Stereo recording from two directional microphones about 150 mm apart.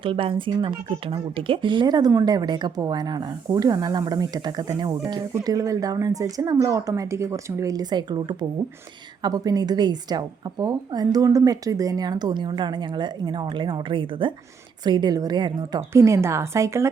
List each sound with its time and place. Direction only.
0.0 s speech: 35° right (ahead or behind); by 16.9 s 20° right (ahead or behind)